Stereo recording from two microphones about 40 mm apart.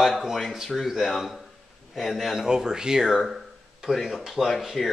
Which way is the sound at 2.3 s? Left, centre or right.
Centre.